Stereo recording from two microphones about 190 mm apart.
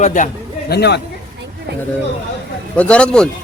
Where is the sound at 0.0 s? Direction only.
40° left (ahead or behind).